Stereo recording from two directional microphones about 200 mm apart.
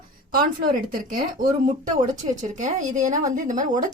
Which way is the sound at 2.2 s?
30° right (ahead or behind).